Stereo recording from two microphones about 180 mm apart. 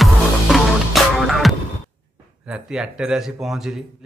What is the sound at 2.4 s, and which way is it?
A man's voice, 5° right (ahead or behind).